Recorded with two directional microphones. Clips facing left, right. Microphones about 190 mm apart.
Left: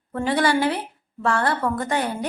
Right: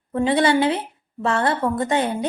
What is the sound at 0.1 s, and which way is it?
Speech, 20° right (ahead or behind).